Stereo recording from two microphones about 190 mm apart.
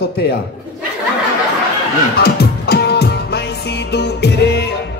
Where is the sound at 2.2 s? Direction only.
55° left (ahead or behind).